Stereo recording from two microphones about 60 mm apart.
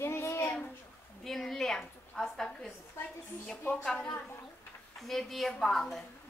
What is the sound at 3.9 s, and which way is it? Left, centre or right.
A child's voice, centre.